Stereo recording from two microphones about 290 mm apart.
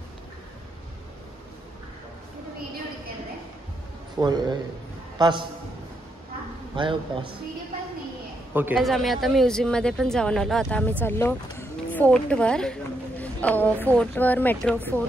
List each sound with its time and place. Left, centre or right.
4.2 s a man's voice: centre
6.7 s a man's voice: centre
8.5 s a woman's voice: centre